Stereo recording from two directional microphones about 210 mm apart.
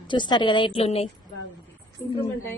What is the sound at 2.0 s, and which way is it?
Speech, 10° left (ahead or behind).